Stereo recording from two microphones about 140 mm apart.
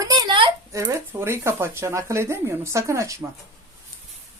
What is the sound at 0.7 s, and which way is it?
Speech, 20° right (ahead or behind).